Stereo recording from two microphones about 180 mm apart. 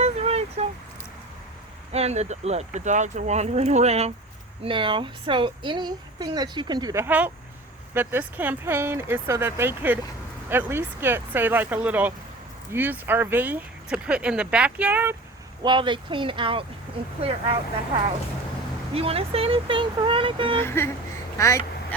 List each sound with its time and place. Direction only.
0.0 s a sound: 35° right (ahead or behind)
1.9 s speech: 35° right (ahead or behind); by 15.1 s 10° right (ahead or behind)
15.6 s speech: 25° right (ahead or behind)
18.9 s speech: 35° right (ahead or behind)
20.6 s speech: 15° left (ahead or behind)